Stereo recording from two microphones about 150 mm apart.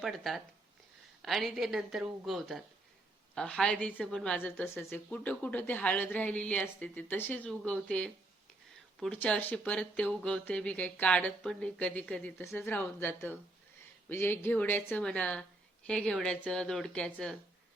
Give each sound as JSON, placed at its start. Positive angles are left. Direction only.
{"t": 0.0, "sound": "a woman's voice", "side_deg": 0}